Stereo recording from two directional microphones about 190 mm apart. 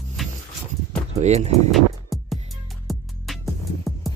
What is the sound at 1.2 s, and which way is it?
Speech, 35° right (ahead or behind).